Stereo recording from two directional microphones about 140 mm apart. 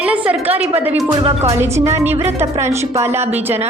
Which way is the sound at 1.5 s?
20° right (ahead or behind).